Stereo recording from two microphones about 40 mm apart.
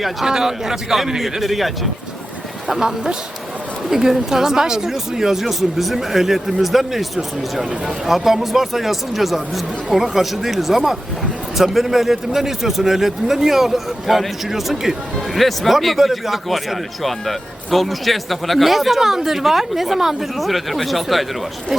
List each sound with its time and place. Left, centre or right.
0.3 s a man's voice: centre
2.6 s a man's voice: centre